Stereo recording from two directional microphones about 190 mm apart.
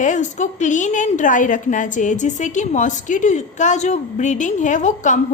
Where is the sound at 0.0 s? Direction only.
40° left (ahead or behind).